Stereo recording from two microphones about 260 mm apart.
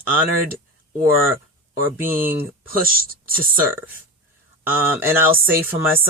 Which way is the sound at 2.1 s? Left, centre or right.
Right.